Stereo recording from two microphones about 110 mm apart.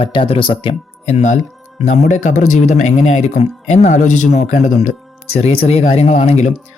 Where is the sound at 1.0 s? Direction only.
90° left.